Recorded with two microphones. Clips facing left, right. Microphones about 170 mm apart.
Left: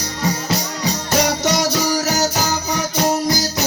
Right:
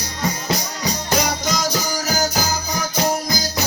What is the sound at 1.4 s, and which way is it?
Music, 70° left (ahead or behind).